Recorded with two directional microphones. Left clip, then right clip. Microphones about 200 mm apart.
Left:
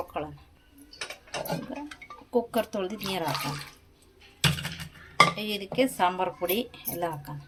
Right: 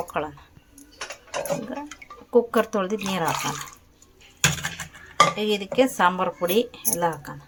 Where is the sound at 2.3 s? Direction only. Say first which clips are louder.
Right 7 dB; 10° right (ahead or behind).